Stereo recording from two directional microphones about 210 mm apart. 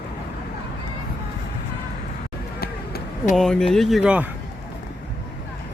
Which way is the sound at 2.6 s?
45° left (ahead or behind).